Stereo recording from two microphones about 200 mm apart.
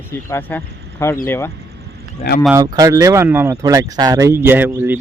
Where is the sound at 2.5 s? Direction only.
15° right (ahead or behind).